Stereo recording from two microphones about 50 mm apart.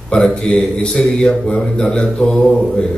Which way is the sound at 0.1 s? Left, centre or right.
Centre.